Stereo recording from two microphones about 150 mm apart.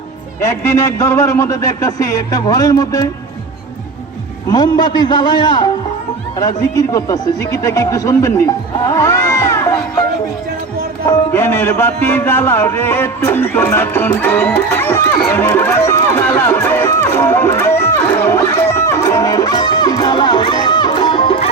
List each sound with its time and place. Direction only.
0.4 s a man's voice: 20° left (ahead or behind)
4.4 s a man's voice: 25° left (ahead or behind)
8.9 s crowd: 20° left (ahead or behind)
11.1 s music: 15° left (ahead or behind)
15.3 s run: 15° left (ahead or behind); by 21.4 s 35° left (ahead or behind)